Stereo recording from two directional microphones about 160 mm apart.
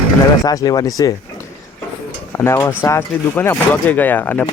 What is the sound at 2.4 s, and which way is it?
Speech, 15° left (ahead or behind).